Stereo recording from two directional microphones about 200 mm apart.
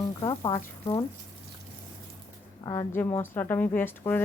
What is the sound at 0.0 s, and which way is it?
Speech, 20° left (ahead or behind).